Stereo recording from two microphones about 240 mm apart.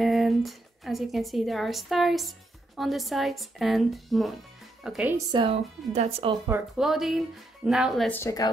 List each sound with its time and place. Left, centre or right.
0.0 s a woman's voice: centre
5.3 s speech: right
6.4 s speech: centre
8.2 s a woman's voice: centre